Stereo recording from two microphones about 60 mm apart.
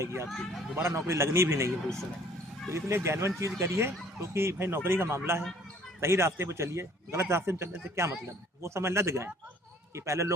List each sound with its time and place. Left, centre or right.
0.0 s a man's voice: right
0.3 s speech: centre
0.8 s a man's voice: right